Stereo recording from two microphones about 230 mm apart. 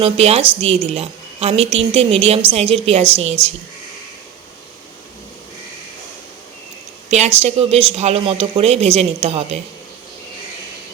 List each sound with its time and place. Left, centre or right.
0.0 s a woman's voice: right
7.3 s a woman's voice: right